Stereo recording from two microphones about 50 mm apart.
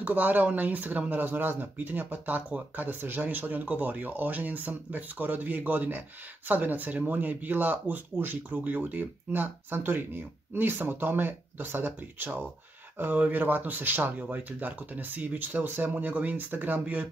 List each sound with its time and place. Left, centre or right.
0.0 s speech: right